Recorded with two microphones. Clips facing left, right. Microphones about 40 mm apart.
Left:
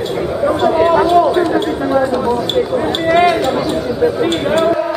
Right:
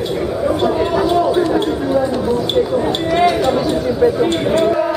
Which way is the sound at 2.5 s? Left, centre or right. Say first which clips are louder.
Even; centre.